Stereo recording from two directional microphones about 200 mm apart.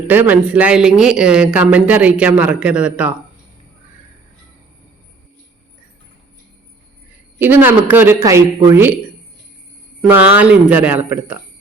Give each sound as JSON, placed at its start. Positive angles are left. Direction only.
{"t": 0.1, "sound": "speech", "side_deg": -10}
{"t": 7.3, "sound": "a man's voice", "side_deg": -10}
{"t": 10.1, "sound": "a man's voice", "side_deg": -10}